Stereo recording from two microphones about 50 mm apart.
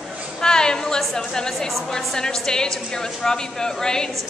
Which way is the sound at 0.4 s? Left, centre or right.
Centre.